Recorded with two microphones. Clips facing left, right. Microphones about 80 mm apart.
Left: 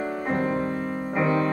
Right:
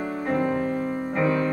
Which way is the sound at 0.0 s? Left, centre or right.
Centre.